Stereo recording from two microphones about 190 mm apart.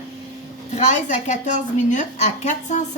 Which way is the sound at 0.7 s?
40° left (ahead or behind).